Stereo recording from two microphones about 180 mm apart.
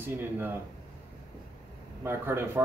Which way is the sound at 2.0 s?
15° right (ahead or behind).